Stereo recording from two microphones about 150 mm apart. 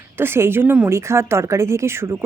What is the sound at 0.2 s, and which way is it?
A woman's voice, 15° right (ahead or behind).